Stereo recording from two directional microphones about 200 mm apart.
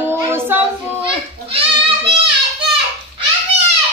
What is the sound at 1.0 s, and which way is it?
Goat, 25° right (ahead or behind).